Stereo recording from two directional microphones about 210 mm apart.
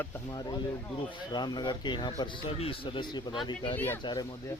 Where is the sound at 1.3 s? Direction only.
20° left (ahead or behind).